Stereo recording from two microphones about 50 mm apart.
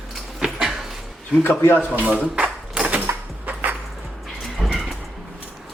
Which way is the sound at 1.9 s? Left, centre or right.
Right.